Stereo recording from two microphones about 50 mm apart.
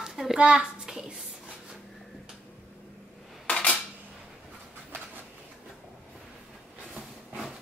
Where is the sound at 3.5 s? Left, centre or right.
Left.